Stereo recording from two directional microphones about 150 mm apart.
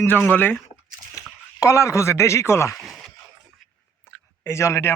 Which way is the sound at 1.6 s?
20° left (ahead or behind).